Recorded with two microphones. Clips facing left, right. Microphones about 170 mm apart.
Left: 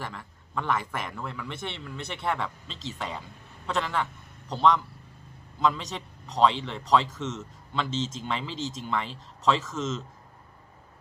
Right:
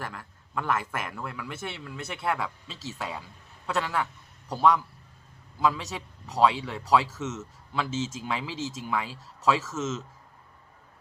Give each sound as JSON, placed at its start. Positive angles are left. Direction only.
{"t": 0.0, "sound": "a man's voice", "side_deg": 0}